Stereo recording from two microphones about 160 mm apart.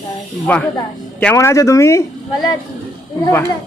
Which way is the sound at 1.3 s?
20° left (ahead or behind).